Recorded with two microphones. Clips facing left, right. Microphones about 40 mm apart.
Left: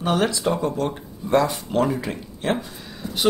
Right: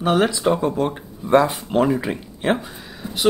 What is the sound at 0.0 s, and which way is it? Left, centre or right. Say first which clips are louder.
Speech: right 3 dB; centre.